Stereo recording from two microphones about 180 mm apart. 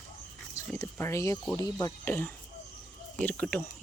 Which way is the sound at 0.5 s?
15° left (ahead or behind).